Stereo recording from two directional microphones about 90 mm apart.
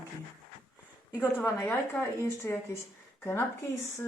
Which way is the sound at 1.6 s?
25° left (ahead or behind).